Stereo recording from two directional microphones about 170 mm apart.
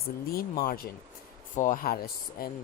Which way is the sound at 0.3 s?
60° left (ahead or behind).